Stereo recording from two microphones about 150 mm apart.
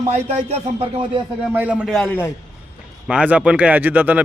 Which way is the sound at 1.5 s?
10° right (ahead or behind).